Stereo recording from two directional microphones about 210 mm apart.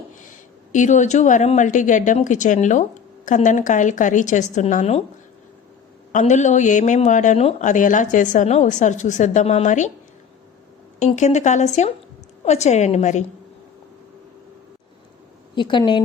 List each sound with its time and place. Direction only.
0.7 s speech: 35° left (ahead or behind)
6.1 s speech: 35° left (ahead or behind)
11.0 s speech: 35° left (ahead or behind)
15.5 s speech: 20° left (ahead or behind)